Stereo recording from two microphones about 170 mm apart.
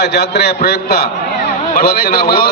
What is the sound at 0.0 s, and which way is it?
A man's voice, 75° left (ahead or behind).